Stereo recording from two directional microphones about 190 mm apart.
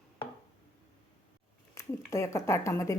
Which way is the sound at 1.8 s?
15° left (ahead or behind).